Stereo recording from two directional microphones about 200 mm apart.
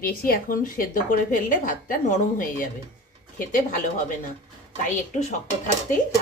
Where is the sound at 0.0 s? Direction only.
45° left (ahead or behind).